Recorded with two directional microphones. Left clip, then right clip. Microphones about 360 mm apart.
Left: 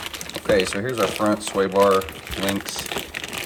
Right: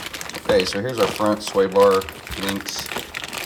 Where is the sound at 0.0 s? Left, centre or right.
Centre.